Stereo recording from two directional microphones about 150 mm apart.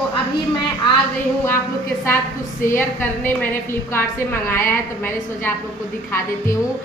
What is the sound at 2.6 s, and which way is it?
A woman's voice, 15° left (ahead or behind).